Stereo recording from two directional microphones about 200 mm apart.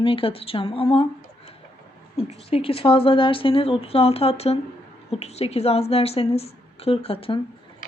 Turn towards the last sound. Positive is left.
turn(degrees=30)  # may be behind; listen again after turning